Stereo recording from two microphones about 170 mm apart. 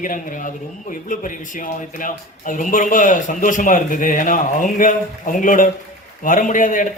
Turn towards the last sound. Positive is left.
turn(degrees=50)  # may be behind; listen again after turning